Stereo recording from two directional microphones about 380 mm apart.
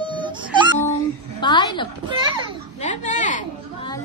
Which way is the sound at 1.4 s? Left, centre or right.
Centre.